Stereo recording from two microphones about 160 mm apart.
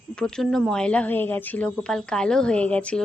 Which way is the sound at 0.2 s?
5° left (ahead or behind).